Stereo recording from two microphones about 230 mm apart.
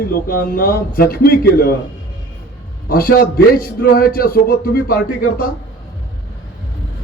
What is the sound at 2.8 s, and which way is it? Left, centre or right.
A man's voice, left.